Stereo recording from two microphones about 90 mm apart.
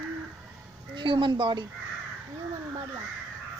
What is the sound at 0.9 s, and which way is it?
Speech, 65° right (ahead or behind).